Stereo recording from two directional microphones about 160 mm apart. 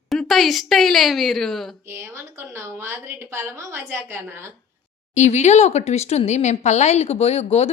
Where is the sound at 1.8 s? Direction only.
15° right (ahead or behind).